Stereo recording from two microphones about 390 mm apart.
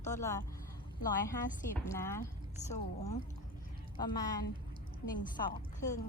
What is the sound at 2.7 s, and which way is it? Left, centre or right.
A woman's voice, centre.